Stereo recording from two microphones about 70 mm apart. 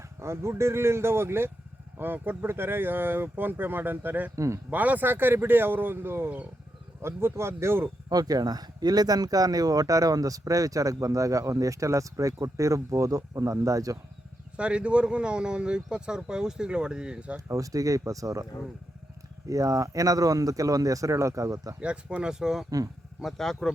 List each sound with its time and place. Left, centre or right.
0.2 s speech: right
4.4 s speech: right
4.7 s speech: right
8.1 s speech: right
14.5 s speech: centre
17.5 s speech: right
19.5 s speech: right
21.8 s speech: centre
23.2 s speech: centre